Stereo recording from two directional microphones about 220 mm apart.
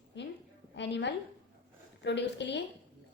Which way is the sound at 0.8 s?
50° left (ahead or behind).